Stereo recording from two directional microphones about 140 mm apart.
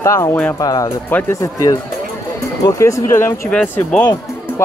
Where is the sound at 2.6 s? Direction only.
20° left (ahead or behind).